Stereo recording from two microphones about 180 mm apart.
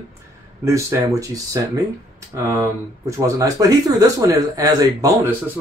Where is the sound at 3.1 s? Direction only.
20° right (ahead or behind).